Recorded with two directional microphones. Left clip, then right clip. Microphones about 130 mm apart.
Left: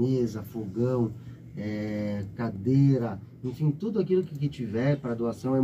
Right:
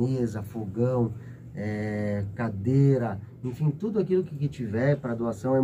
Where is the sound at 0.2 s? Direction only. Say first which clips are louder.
Left 1 dB; 15° right (ahead or behind).